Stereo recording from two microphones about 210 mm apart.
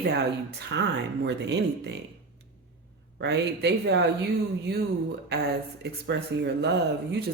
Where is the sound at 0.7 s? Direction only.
55° right (ahead or behind).